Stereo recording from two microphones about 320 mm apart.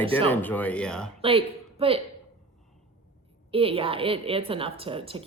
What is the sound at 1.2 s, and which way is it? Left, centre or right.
Speech, centre.